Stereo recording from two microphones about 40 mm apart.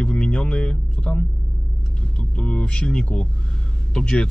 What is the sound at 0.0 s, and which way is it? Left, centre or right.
Speech, left.